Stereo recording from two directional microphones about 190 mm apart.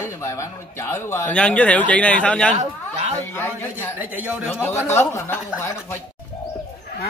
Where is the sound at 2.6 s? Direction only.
35° right (ahead or behind).